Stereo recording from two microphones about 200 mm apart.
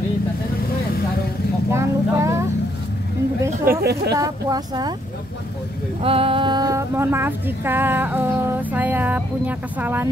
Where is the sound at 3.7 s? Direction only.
45° right (ahead or behind).